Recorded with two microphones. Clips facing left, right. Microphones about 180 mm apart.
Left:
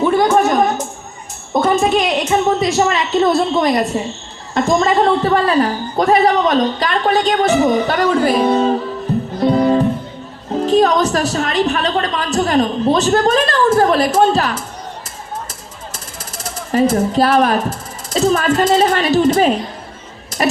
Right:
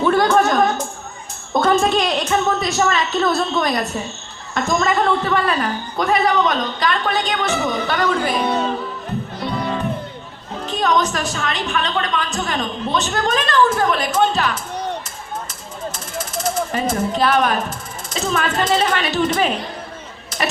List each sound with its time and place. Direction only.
0.0 s a sound: 15° left (ahead or behind)
1.8 s a woman's voice: 20° left (ahead or behind); by 8.8 s 35° left (ahead or behind)
9.4 s music: 40° left (ahead or behind)
10.7 s a man's voice: 35° left (ahead or behind)
16.4 s speech: 35° left (ahead or behind)